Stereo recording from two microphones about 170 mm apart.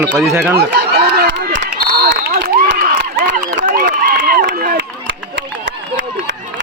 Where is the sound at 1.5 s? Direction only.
65° right (ahead or behind).